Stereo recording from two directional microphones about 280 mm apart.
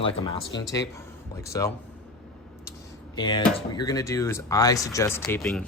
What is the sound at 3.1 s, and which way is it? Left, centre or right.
Speech, centre.